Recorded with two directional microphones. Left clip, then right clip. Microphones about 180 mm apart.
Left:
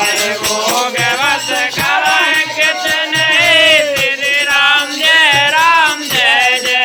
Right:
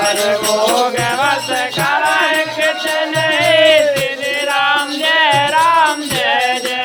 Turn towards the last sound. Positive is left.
turn(degrees=-20)  # may be behind; listen again after turning